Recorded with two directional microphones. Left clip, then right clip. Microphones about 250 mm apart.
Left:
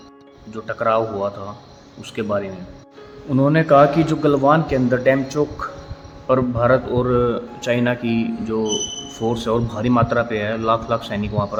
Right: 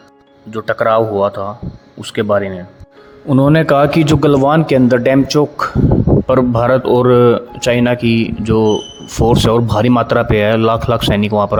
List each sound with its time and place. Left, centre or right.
0.5 s a man's voice: right